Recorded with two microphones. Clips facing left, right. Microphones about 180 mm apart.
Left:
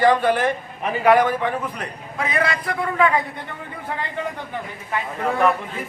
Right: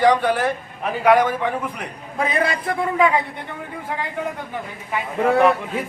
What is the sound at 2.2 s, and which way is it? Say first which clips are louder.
Speech: right 2 dB; 30° right (ahead or behind).